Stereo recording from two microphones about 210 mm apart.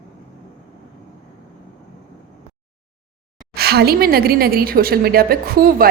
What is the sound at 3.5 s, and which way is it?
A woman's voice, 50° right (ahead or behind).